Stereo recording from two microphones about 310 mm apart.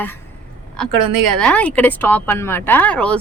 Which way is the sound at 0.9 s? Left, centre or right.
Right.